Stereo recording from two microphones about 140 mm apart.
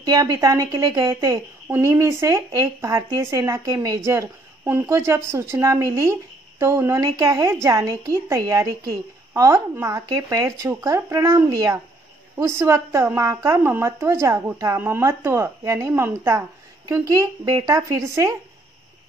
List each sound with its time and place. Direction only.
0.0 s speech: 30° right (ahead or behind)